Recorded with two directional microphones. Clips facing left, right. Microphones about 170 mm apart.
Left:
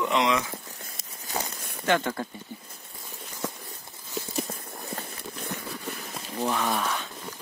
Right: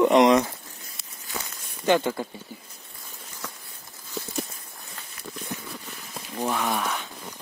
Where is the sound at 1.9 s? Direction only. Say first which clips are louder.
Right 3 dB; 20° right (ahead or behind).